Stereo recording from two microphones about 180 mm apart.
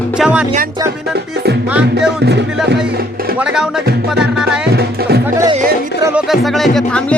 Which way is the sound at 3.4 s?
5° right (ahead or behind).